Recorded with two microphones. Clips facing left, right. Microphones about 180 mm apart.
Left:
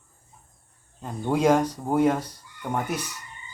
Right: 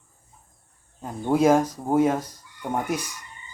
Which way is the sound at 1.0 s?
5° right (ahead or behind).